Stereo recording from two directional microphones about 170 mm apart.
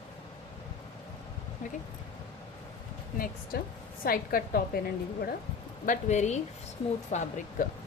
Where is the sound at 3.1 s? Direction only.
55° left (ahead or behind).